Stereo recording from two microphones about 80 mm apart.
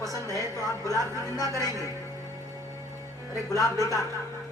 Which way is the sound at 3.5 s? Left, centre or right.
Left.